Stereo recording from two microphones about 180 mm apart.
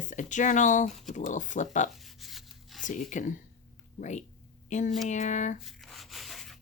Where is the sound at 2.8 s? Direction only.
45° left (ahead or behind).